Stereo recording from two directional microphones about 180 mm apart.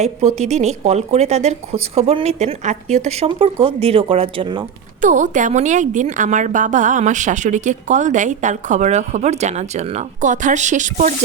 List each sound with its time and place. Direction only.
0.0 s speech: 40° right (ahead or behind)
4.9 s a woman's voice: 45° right (ahead or behind)